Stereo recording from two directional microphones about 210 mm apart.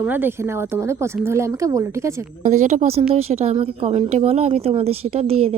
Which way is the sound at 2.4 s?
35° right (ahead or behind).